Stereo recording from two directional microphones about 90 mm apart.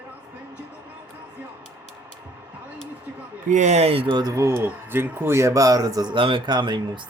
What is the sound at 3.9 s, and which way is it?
Speech, 90° right.